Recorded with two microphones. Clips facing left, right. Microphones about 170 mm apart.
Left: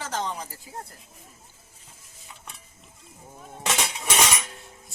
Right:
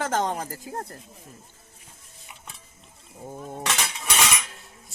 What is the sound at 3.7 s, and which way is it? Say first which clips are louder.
Cutlery: left 3 dB; 25° left (ahead or behind).